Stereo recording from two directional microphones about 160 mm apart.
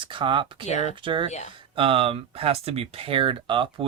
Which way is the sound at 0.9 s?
30° right (ahead or behind).